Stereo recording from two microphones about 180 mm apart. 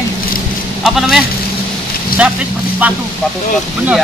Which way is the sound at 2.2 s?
5° right (ahead or behind).